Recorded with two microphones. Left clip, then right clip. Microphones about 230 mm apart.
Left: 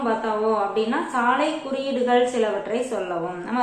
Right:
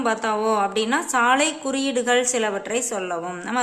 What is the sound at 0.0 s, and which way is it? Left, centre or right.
A woman's voice, right.